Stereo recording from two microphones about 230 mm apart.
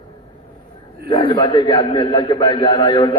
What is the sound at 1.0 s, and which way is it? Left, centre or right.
A man's voice, left.